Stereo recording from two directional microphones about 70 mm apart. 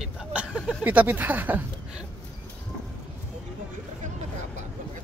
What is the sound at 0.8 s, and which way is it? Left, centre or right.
Speech, right.